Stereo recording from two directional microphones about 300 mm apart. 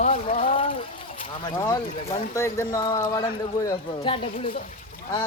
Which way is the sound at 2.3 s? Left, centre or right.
Centre.